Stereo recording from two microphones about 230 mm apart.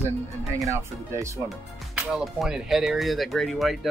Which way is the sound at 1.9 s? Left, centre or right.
Centre.